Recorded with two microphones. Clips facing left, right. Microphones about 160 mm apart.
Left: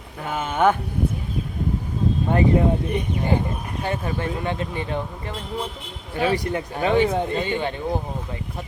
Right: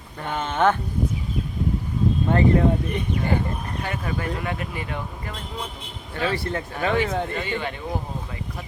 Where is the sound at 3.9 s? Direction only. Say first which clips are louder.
Left 3 dB; 25° left (ahead or behind).